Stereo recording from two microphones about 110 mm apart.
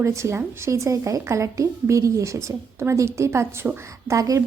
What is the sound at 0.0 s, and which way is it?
Speech, 25° right (ahead or behind).